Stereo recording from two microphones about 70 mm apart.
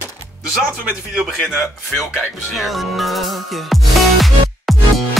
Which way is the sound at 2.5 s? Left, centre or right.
Centre.